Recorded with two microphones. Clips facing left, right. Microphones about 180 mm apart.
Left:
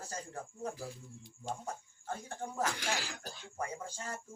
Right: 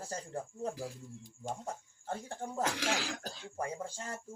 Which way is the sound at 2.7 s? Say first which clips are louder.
Right 3 dB; 90° right.